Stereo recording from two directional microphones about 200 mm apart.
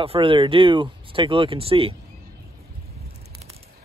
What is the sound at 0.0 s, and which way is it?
Speech, 25° right (ahead or behind).